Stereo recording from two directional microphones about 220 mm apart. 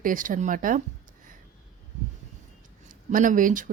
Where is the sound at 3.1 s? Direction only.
35° right (ahead or behind).